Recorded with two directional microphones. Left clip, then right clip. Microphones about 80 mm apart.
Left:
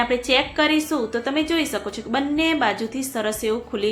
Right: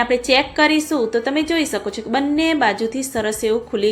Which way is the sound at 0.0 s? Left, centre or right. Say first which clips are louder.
Right 4 dB; right.